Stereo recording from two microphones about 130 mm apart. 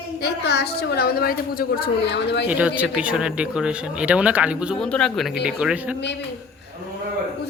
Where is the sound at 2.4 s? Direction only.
10° right (ahead or behind).